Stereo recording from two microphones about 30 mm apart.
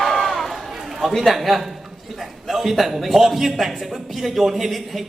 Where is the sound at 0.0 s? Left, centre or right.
Centre.